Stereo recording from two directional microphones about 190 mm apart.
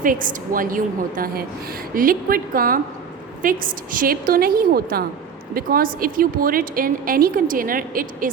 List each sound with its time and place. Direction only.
0.0 s a woman's voice: 45° right (ahead or behind)